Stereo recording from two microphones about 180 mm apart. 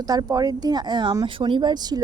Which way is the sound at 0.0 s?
20° right (ahead or behind).